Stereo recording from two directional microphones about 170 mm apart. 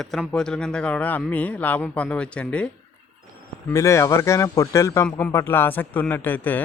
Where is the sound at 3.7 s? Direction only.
15° left (ahead or behind).